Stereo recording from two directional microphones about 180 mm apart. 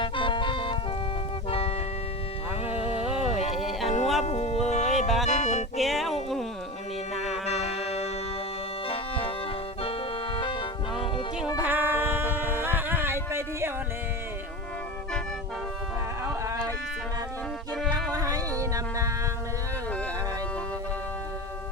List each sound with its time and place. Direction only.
0.0 s music: 25° left (ahead or behind)
2.6 s a sound: 5° right (ahead or behind)
3.6 s music: centre (ahead or behind)
3.8 s music: 40° left (ahead or behind)
5.0 s music: centre (ahead or behind)
5.3 s music: 40° left (ahead or behind)
5.7 s music: centre (ahead or behind)
7.4 s music: 35° left (ahead or behind)
10.3 s music: 30° left (ahead or behind)
11.6 s music: 10° right (ahead or behind)
16.2 s a sound: 15° right (ahead or behind)
18.1 s a sound: 20° right (ahead or behind)